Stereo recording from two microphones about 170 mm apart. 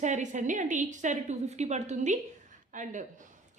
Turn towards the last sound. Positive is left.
turn(degrees=-45)  # may be behind; listen again after turning